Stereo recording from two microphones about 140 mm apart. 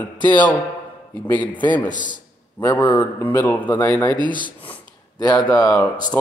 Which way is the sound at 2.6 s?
15° left (ahead or behind).